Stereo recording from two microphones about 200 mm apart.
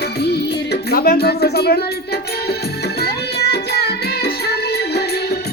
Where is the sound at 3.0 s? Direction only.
55° left (ahead or behind).